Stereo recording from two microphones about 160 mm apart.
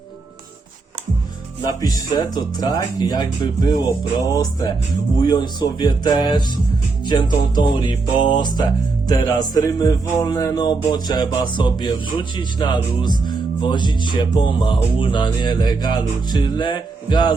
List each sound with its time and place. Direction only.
1.8 s speech: 25° left (ahead or behind)